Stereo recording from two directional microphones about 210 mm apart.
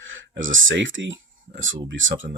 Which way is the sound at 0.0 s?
65° right (ahead or behind).